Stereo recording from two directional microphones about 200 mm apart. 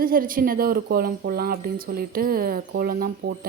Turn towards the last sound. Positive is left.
turn(degrees=-45)  # may be behind; listen again after turning